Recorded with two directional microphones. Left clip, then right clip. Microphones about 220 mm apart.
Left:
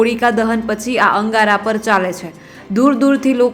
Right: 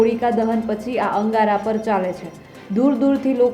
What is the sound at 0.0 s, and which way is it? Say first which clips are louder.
A woman's voice: left 4 dB; 15° left (ahead or behind).